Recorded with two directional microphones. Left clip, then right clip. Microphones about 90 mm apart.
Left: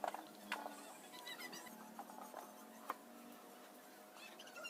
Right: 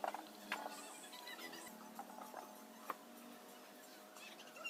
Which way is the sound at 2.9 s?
20° left (ahead or behind).